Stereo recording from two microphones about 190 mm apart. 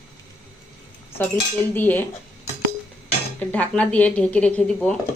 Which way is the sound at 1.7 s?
10° left (ahead or behind).